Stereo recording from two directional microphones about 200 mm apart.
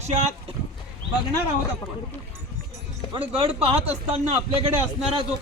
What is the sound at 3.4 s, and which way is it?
Speech, 30° right (ahead or behind).